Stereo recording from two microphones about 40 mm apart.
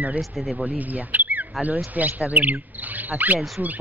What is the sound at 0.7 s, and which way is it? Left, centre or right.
Speech, right.